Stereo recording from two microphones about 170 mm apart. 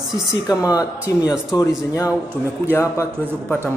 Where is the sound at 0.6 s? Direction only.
20° left (ahead or behind).